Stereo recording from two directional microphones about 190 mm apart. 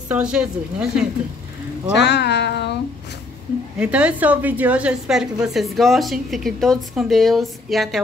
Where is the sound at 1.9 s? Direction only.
65° left (ahead or behind).